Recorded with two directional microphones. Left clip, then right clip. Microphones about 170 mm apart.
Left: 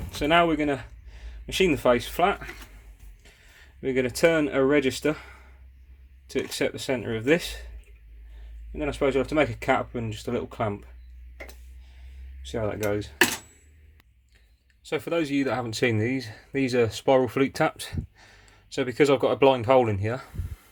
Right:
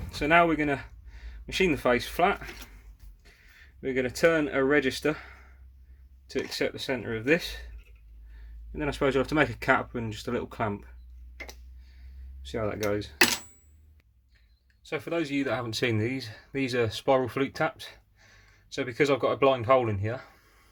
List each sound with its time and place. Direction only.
0.1 s speech: 5° left (ahead or behind)
3.2 s a sound: 15° left (ahead or behind)
3.8 s speech: 20° left (ahead or behind)
6.5 s speech: 15° left (ahead or behind)
8.7 s speech: 5° right (ahead or behind)
12.4 s speech: 5° left (ahead or behind)
14.8 s speech: 20° left (ahead or behind)
17.5 s speech: 25° left (ahead or behind)